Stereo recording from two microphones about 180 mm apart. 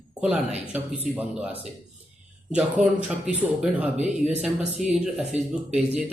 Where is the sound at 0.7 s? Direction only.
10° right (ahead or behind).